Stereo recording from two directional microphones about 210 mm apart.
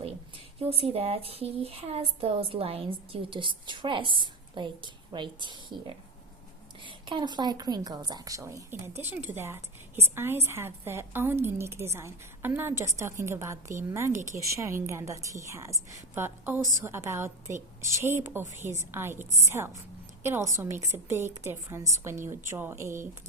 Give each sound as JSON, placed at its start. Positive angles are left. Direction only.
{"t": 0.6, "sound": "a woman's voice", "side_deg": -30}